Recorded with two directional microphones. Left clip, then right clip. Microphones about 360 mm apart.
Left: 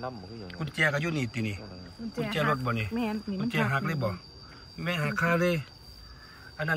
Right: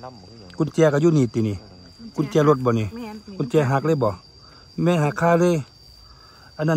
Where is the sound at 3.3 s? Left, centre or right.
Centre.